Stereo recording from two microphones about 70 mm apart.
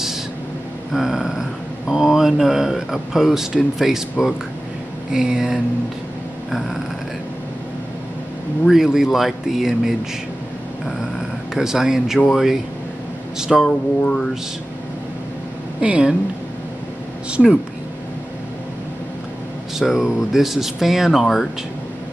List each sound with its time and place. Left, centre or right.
0.9 s a man's voice: centre
8.6 s speech: centre
11.5 s a man's voice: centre
13.7 s speech: centre
15.8 s a man's voice: centre
17.4 s speech: centre
19.8 s speech: centre